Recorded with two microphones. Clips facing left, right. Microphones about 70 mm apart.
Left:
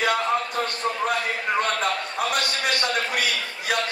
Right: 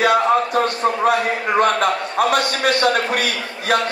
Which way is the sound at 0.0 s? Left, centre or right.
Right.